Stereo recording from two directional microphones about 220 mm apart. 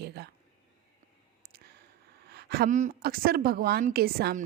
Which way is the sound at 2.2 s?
45° right (ahead or behind).